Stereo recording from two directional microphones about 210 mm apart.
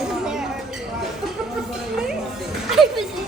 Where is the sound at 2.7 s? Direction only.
Centre (ahead or behind).